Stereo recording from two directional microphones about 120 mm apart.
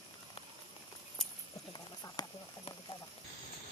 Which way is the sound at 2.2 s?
35° left (ahead or behind).